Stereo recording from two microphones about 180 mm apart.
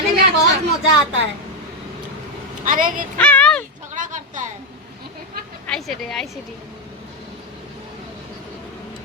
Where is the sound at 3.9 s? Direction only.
45° right (ahead or behind).